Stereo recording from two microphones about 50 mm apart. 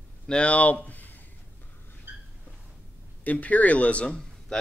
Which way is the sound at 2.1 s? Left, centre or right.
Right.